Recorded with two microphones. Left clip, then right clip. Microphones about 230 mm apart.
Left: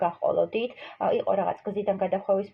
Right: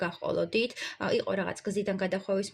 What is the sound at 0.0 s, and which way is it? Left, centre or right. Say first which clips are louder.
Speech: left 6 dB; right.